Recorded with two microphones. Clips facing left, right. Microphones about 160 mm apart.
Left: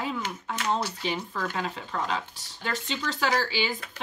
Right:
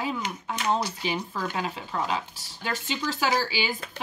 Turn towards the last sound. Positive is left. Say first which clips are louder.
# even
turn(degrees=-5)  # may be behind; listen again after turning